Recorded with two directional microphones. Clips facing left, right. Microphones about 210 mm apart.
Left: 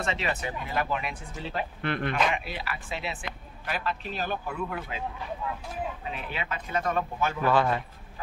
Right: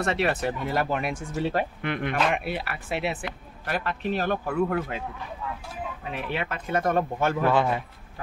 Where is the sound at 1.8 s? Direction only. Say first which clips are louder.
Right 1 dB; 15° right (ahead or behind).